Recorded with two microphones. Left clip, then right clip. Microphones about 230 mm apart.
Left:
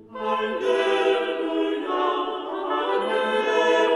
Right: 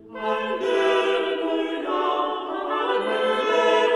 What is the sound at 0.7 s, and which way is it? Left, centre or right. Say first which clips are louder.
Choir: right 1 dB; left.